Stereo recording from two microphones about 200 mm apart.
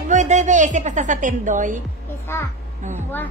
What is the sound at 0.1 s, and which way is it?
A woman's voice, 35° right (ahead or behind).